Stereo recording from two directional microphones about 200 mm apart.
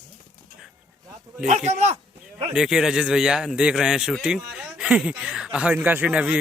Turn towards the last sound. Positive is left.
turn(degrees=-5)  # may be behind; listen again after turning